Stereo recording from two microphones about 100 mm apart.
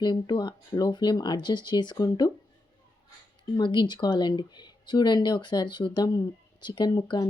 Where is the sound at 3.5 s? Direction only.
50° left (ahead or behind).